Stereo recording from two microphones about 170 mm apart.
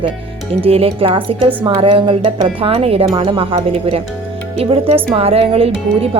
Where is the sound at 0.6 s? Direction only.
35° right (ahead or behind).